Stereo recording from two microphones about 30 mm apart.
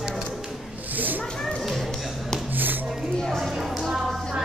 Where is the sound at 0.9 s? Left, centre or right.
Right.